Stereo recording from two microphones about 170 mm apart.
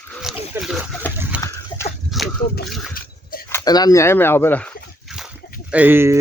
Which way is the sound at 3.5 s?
20° left (ahead or behind).